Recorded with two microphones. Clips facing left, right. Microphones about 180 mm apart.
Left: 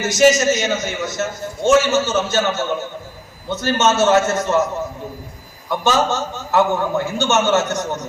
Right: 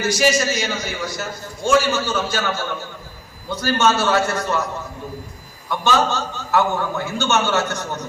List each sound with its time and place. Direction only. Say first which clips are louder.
0.3 s a man's voice: left 5 dB; 20° left (ahead or behind)
5.8 s a man's voice: left 1 dB; 20° left (ahead or behind)